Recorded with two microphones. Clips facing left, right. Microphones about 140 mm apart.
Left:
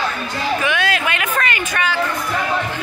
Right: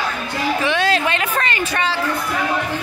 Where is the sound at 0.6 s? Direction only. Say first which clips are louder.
Right 2 dB; 30° right (ahead or behind).